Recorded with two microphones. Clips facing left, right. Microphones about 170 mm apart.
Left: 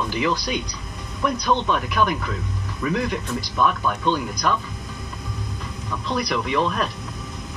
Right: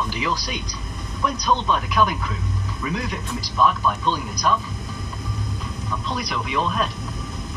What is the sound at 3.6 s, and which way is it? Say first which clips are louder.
Speech: right 2 dB; 55° left (ahead or behind).